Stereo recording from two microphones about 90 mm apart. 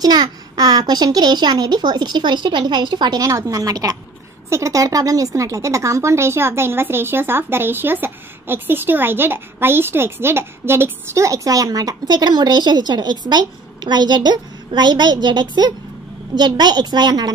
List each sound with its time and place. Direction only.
0.0 s a child's voice: 50° right (ahead or behind)